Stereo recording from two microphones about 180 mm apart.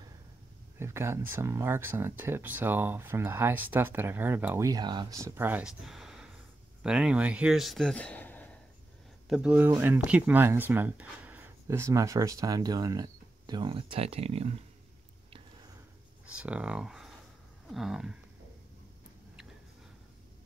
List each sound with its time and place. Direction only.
0.7 s speech: 15° right (ahead or behind); by 8.5 s 10° left (ahead or behind)
9.3 s speech: 5° right (ahead or behind); by 14.6 s 35° right (ahead or behind)
16.3 s speech: 5° right (ahead or behind)